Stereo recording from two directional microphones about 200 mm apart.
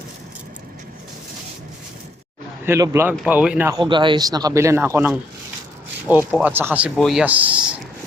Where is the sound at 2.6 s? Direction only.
15° right (ahead or behind).